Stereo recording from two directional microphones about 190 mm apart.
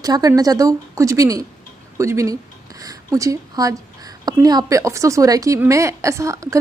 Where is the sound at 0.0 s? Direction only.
20° right (ahead or behind).